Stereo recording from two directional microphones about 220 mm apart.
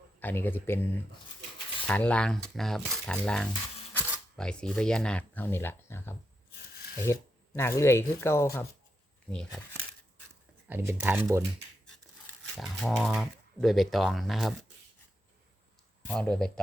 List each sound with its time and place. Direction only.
0.2 s speech: 10° left (ahead or behind)
1.9 s speech: 5° left (ahead or behind)
6.7 s a sound: 45° left (ahead or behind)
7.0 s speech: 10° left (ahead or behind)
10.7 s speech: 10° right (ahead or behind)
12.5 s speech: centre (ahead or behind)
16.0 s speech: 5° left (ahead or behind)